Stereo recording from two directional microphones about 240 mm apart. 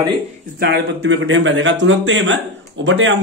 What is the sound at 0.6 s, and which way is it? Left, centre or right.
Speech, right.